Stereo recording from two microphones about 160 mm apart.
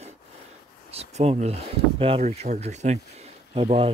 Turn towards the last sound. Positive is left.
turn(degrees=-35)  # may be behind; listen again after turning